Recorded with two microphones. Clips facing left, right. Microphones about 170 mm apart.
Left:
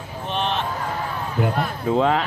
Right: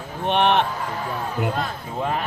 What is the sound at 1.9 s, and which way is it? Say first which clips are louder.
Speech: left 7 dB; 90° left.